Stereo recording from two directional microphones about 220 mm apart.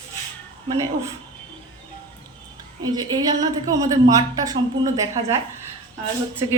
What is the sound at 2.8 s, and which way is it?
A woman's voice, 20° right (ahead or behind).